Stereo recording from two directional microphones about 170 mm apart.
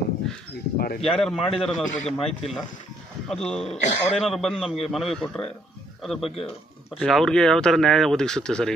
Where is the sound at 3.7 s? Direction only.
40° left (ahead or behind).